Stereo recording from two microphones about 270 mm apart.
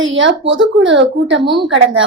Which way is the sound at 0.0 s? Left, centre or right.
Right.